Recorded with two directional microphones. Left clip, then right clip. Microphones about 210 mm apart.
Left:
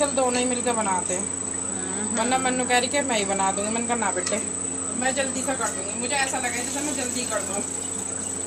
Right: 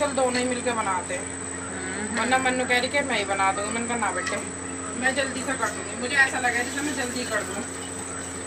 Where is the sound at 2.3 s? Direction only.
55° left (ahead or behind).